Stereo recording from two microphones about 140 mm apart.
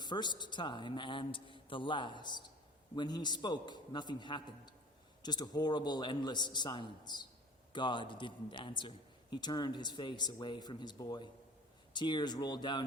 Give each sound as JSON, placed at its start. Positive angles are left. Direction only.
{"t": 0.0, "sound": "a man's voice", "side_deg": 30}